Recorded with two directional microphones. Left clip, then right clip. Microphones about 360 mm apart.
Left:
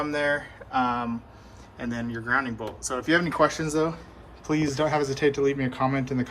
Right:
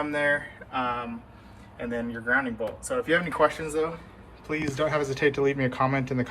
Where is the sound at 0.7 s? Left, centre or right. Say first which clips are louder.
Left 4 dB; centre.